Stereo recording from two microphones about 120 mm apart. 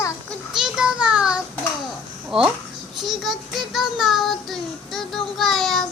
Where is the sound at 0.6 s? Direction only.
5° right (ahead or behind).